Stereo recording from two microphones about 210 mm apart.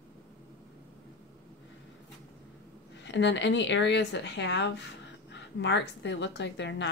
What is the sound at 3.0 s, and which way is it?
Speech, 60° left (ahead or behind).